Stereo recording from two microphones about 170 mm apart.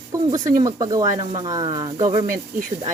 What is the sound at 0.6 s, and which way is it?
Speech, 20° right (ahead or behind).